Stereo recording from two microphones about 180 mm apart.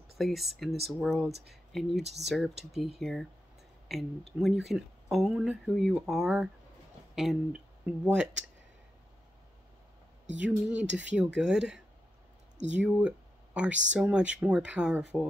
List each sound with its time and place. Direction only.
0.2 s speech: centre (ahead or behind)
10.4 s speech: 10° right (ahead or behind)
10.9 s speech: 85° right
11.1 s speech: 5° right (ahead or behind)
13.7 s speech: 90° right
13.9 s speech: 5° right (ahead or behind)